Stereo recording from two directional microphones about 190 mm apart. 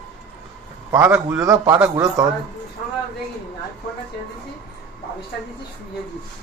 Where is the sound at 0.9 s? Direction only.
10° right (ahead or behind).